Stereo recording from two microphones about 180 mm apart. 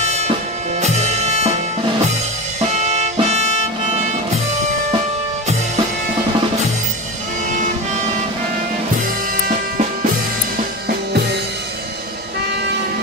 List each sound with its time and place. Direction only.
0.0 s music: 35° right (ahead or behind)
2.6 s music: 35° right (ahead or behind)